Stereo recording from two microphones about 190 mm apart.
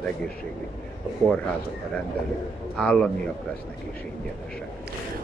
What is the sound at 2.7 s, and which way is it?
Speech, 5° left (ahead or behind).